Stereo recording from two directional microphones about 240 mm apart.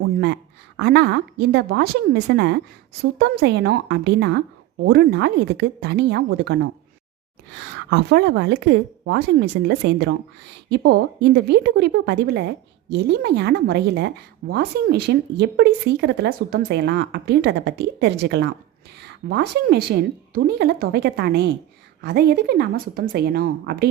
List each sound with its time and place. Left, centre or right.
0.8 s a woman's voice: right
7.9 s a woman's voice: right